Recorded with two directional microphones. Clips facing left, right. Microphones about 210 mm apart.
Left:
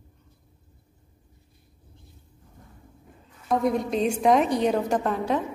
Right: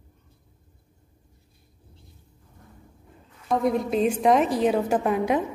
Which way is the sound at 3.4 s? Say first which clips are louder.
Right 1 dB; centre (ahead or behind).